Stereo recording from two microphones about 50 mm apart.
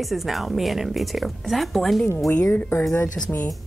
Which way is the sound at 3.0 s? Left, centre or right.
Left.